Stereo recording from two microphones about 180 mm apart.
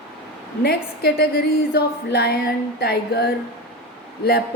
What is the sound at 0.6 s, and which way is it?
A woman's voice, 65° left (ahead or behind).